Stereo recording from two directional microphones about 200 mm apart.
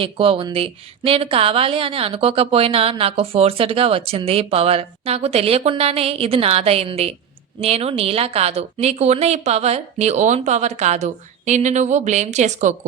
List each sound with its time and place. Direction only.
0.0 s a woman's voice: 25° right (ahead or behind)